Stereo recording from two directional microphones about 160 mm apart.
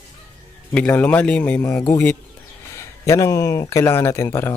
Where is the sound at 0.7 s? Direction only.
10° left (ahead or behind).